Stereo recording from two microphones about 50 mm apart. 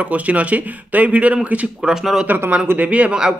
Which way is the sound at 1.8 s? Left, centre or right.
Centre.